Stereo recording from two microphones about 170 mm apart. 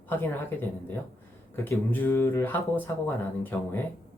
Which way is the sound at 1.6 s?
10° left (ahead or behind).